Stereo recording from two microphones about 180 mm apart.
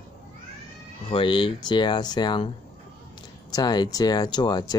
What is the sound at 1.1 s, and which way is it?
Speech, 30° left (ahead or behind).